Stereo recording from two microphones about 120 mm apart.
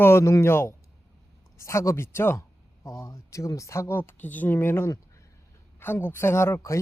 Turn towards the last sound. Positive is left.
turn(degrees=25)  # may be behind; listen again after turning